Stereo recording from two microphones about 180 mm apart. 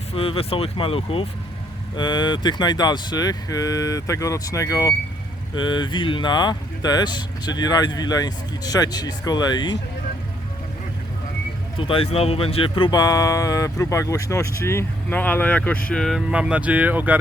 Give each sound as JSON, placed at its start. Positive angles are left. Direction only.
{"t": 0.1, "sound": "speech", "side_deg": 30}
{"t": 11.8, "sound": "speech", "side_deg": 30}